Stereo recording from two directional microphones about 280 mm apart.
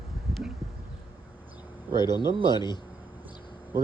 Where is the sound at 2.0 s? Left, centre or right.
Centre.